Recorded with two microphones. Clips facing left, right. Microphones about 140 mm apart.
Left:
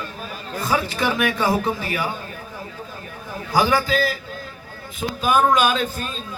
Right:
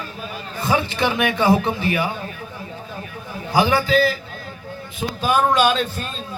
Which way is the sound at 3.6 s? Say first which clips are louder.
Right 2 dB; 40° left (ahead or behind).